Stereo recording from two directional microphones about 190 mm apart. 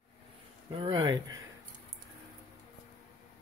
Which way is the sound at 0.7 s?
25° right (ahead or behind).